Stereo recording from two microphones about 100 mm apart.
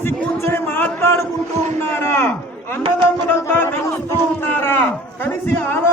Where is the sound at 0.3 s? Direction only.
25° left (ahead or behind).